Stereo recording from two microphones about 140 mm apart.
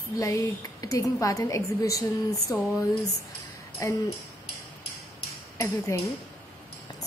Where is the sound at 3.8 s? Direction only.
25° left (ahead or behind).